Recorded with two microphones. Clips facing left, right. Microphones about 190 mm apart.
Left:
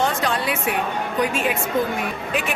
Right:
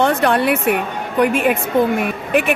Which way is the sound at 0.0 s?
60° right (ahead or behind).